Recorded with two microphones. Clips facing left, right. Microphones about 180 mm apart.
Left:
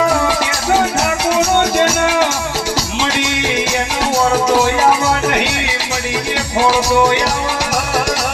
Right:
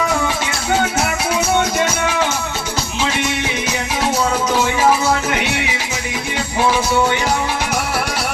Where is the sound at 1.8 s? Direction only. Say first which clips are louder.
Left 4 dB; 85° left.